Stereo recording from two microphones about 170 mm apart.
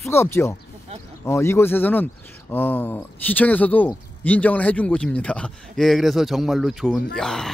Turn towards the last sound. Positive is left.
turn(degrees=5)  # may be behind; listen again after turning